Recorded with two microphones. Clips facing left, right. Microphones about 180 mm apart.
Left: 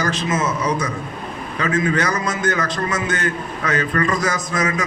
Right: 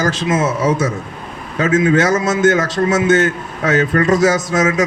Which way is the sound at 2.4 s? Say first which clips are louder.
Right 8 dB; 90° right.